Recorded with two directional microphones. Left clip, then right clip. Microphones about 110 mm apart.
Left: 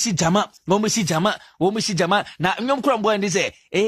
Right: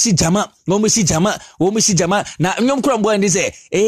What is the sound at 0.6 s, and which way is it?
Speech, 30° right (ahead or behind).